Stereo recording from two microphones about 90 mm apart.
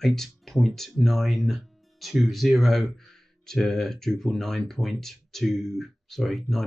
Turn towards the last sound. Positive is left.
turn(degrees=5)  # may be behind; listen again after turning